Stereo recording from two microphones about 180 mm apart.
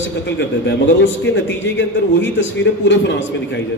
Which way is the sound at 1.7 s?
90° left.